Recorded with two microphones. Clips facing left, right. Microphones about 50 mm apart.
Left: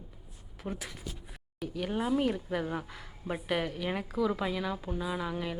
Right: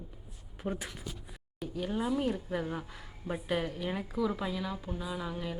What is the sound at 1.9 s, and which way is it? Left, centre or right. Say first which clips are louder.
Speech: left 2 dB; left.